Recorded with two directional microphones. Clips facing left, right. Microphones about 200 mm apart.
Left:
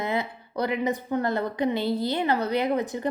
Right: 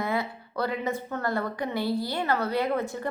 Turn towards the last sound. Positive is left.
turn(degrees=20)  # may be behind; listen again after turning